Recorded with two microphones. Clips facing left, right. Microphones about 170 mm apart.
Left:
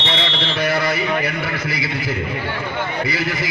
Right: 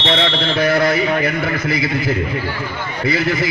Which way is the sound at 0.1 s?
55° right (ahead or behind).